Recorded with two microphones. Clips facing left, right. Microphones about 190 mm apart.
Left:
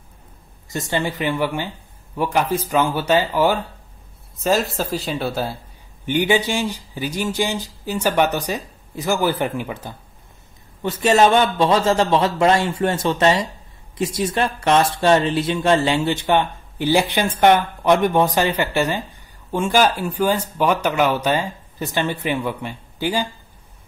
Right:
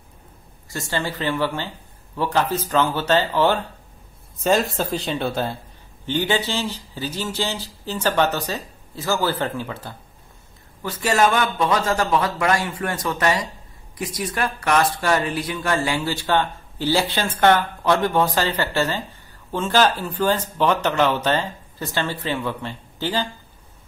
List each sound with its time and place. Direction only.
0.7 s a man's voice: 20° left (ahead or behind)